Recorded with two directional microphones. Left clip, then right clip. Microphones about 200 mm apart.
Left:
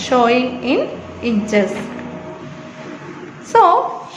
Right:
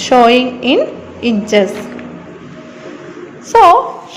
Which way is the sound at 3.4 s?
20° right (ahead or behind).